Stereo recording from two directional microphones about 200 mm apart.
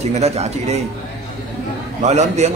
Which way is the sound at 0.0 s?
35° right (ahead or behind).